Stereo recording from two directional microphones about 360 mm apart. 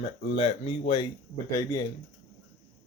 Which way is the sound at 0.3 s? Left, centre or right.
Centre.